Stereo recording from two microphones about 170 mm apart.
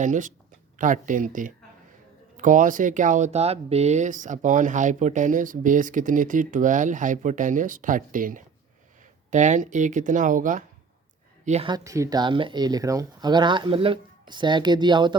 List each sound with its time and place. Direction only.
0.0 s a woman's voice: 50° right (ahead or behind)
11.7 s speech: 20° right (ahead or behind)